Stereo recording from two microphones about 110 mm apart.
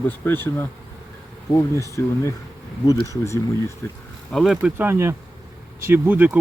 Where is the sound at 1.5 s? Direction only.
30° left (ahead or behind).